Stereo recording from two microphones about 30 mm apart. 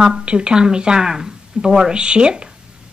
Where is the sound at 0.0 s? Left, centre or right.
Right.